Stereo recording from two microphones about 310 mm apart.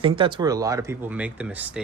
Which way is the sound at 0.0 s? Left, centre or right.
Centre.